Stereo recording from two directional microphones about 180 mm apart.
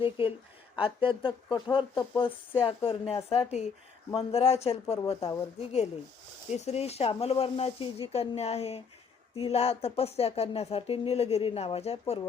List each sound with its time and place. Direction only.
0.8 s speech: 30° left (ahead or behind)